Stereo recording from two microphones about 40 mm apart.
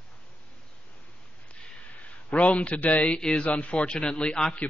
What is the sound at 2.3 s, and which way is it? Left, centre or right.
Speech, left.